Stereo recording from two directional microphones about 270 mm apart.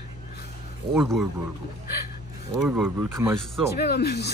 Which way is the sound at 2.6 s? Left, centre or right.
Centre.